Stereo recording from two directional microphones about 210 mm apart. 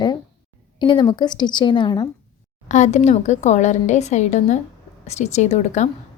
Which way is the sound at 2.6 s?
35° left (ahead or behind).